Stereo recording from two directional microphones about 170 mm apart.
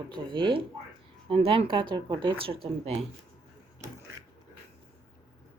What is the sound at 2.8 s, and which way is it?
Speech, 40° right (ahead or behind).